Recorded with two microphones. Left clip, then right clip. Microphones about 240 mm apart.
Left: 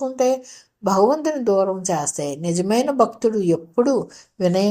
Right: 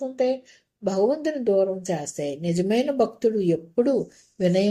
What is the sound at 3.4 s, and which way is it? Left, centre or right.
Speech, left.